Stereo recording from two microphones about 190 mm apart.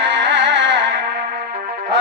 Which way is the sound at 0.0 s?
70° right (ahead or behind).